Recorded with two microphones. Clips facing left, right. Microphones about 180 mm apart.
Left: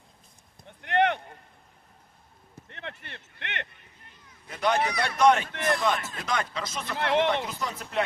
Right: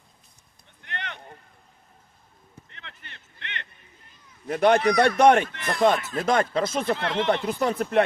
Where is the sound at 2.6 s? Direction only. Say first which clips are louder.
Left 11 dB; 50° left (ahead or behind).